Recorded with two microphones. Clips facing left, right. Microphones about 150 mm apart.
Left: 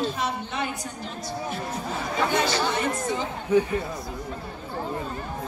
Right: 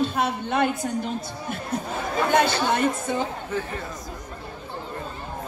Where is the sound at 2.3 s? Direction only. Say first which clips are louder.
Right 6 dB; 55° right (ahead or behind).